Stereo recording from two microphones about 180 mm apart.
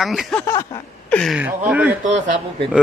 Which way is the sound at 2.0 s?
45° right (ahead or behind).